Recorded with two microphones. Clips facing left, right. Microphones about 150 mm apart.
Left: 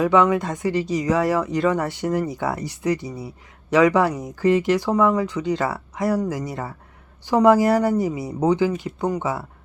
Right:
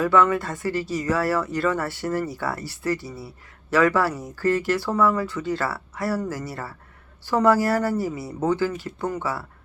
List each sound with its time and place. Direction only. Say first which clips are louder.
0.0 s speech: left 2 dB; 15° left (ahead or behind)